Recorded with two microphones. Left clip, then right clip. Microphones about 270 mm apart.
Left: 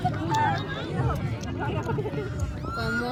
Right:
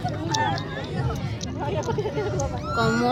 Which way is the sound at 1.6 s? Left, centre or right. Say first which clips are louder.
Right 4 dB; right.